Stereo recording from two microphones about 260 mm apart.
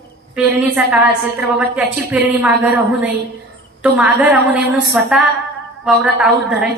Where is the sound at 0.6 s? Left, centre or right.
Centre.